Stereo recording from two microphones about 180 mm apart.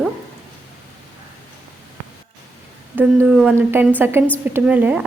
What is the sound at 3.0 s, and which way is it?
A woman's voice, 10° right (ahead or behind).